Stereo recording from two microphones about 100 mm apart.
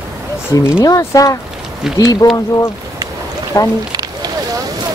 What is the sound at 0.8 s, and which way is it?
Speech, 35° left (ahead or behind).